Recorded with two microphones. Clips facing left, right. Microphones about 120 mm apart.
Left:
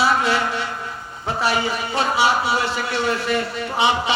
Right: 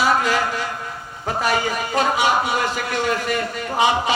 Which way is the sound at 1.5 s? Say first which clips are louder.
Right 1 dB; 45° right (ahead or behind).